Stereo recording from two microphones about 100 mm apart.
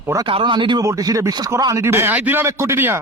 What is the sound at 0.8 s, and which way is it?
Speech, 35° right (ahead or behind).